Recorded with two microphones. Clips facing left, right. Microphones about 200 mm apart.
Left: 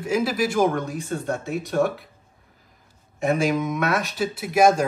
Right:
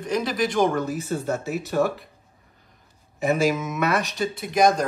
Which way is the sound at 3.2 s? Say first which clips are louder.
Even; centre (ahead or behind).